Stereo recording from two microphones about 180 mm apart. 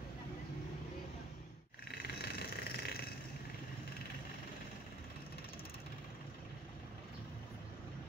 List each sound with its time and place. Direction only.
1.9 s vehicle: 60° left (ahead or behind)